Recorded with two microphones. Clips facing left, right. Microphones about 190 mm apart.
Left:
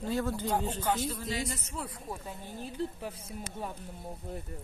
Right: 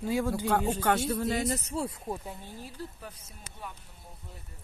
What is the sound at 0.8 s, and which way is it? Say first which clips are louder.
Speech: right 4 dB; 70° right (ahead or behind).